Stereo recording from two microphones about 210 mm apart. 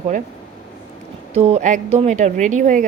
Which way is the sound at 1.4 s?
30° right (ahead or behind).